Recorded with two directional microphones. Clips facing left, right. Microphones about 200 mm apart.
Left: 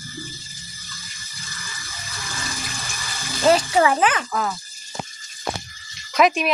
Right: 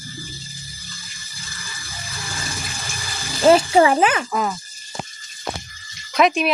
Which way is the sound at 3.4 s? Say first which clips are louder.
Right 4 dB; 25° right (ahead or behind).